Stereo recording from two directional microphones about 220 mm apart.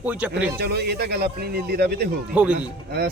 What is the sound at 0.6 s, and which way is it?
Speech, 50° right (ahead or behind).